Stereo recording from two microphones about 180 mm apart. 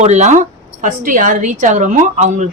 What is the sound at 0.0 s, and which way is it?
A woman's voice, 40° right (ahead or behind).